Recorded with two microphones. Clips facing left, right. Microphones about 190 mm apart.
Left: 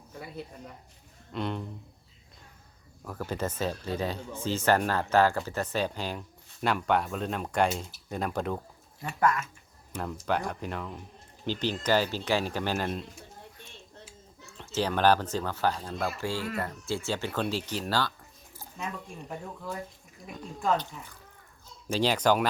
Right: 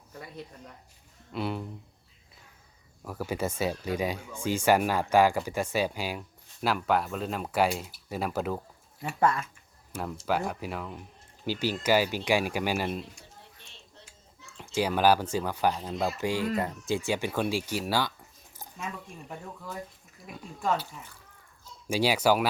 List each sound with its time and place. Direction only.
0.1 s speech: 5° left (ahead or behind)
3.0 s speech: 10° right (ahead or behind)
9.2 s speech: 30° right (ahead or behind)
9.9 s speech: 5° right (ahead or behind)
14.6 s speech: 10° right (ahead or behind)
20.6 s speech: 5° right (ahead or behind)
21.8 s speech: 10° right (ahead or behind)